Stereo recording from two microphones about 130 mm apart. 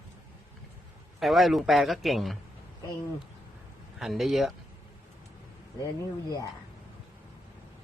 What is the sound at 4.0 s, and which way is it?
Speech, centre (ahead or behind).